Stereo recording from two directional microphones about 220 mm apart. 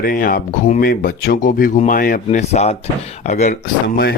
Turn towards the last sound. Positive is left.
turn(degrees=40)  # may be behind; listen again after turning